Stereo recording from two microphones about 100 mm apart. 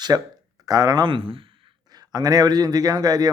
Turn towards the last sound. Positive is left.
turn(degrees=-40)  # may be behind; listen again after turning